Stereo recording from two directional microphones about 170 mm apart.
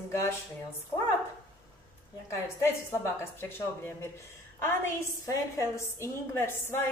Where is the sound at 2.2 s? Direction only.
15° left (ahead or behind).